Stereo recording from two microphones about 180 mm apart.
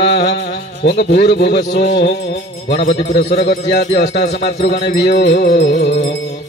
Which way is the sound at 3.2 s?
35° left (ahead or behind).